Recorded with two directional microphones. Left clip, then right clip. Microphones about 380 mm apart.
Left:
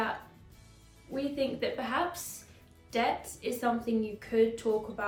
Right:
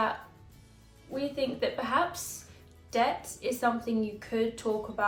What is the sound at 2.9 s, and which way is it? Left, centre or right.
A woman's voice, centre.